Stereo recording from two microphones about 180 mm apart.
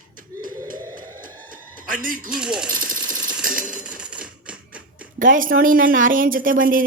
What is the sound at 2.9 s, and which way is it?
Jackhammer, 5° right (ahead or behind).